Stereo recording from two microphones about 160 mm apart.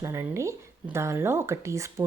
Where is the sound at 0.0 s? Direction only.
15° right (ahead or behind).